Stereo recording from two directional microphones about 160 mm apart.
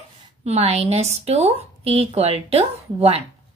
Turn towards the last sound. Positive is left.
turn(degrees=-40)  # may be behind; listen again after turning